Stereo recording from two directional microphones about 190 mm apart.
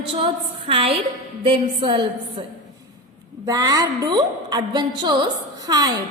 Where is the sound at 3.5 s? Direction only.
20° right (ahead or behind).